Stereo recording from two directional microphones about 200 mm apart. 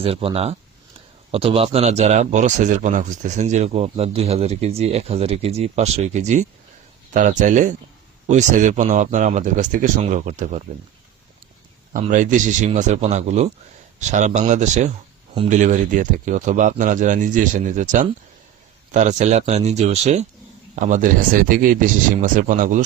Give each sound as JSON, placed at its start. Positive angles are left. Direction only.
{"t": 0.0, "sound": "speech", "side_deg": -30}
{"t": 11.9, "sound": "speech", "side_deg": -40}